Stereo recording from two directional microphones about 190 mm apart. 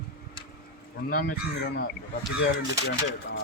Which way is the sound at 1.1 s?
50° left (ahead or behind).